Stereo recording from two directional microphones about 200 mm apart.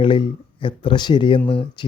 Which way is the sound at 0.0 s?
25° left (ahead or behind).